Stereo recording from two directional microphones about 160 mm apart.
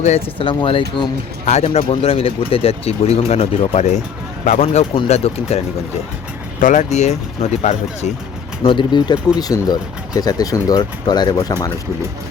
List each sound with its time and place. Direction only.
0.0 s speech: 35° left (ahead or behind)
1.5 s speech: 40° left (ahead or behind)
6.6 s speech: 50° left (ahead or behind)
8.6 s speech: 30° left (ahead or behind)